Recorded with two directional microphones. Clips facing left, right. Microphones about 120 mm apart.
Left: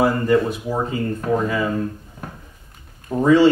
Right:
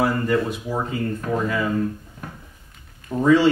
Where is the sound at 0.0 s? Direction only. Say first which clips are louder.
Left 4 dB; 25° left (ahead or behind).